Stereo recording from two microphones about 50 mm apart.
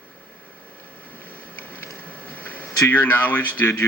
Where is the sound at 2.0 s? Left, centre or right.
Left.